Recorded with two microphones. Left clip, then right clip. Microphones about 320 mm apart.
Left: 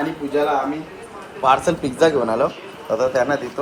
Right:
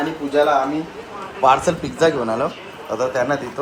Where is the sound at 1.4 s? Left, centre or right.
Centre.